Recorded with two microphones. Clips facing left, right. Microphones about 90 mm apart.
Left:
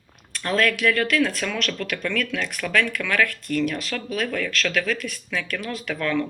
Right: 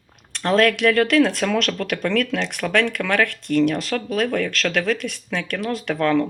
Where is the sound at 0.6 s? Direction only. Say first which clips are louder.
Right 4 dB; 60° right (ahead or behind).